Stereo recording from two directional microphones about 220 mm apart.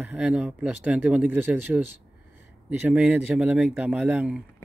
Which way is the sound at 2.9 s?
5° right (ahead or behind).